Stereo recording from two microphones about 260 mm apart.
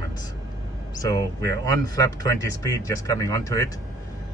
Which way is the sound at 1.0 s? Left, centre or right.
Centre.